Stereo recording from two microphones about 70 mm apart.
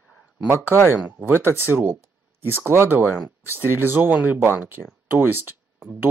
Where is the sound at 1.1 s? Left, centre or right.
Right.